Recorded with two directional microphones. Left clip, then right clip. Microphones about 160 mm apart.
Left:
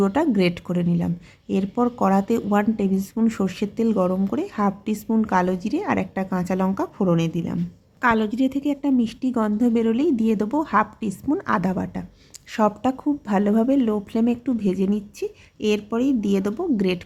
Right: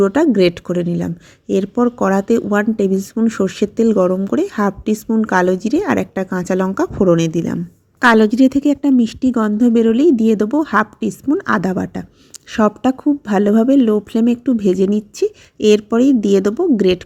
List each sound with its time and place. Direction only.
0.0 s speech: 20° right (ahead or behind)